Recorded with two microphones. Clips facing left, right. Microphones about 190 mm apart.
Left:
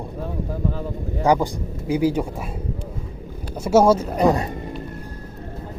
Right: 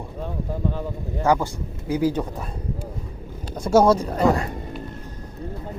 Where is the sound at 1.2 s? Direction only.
15° left (ahead or behind).